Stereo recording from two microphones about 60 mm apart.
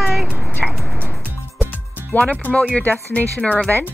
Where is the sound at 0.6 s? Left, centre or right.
Centre.